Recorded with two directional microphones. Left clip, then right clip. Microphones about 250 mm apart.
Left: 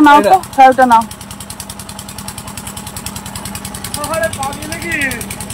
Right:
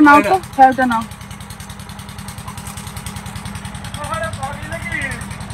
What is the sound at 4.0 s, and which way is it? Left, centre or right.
Vehicle, left.